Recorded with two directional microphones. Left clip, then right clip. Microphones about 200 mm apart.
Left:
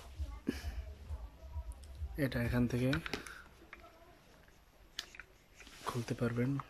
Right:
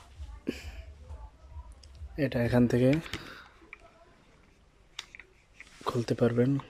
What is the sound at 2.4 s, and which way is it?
Speech, 25° right (ahead or behind).